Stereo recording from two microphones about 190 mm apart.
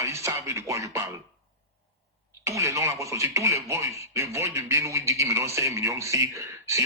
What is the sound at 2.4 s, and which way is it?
Speech, 15° right (ahead or behind).